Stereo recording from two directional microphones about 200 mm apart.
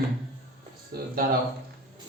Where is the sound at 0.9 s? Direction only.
50° right (ahead or behind).